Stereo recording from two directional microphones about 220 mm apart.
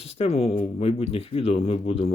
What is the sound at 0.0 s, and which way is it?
Speech, 25° left (ahead or behind).